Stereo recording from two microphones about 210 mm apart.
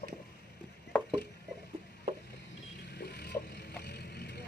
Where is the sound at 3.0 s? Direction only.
50° left (ahead or behind).